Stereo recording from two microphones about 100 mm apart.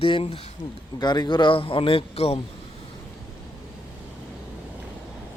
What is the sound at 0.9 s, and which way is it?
A man's voice, 45° left (ahead or behind).